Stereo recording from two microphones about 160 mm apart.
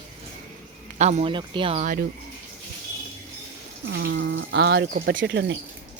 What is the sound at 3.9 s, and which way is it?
Speech, 90° right.